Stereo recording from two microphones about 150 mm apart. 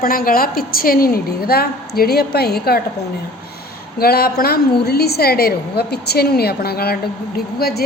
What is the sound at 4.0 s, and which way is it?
A woman's voice, 90° left.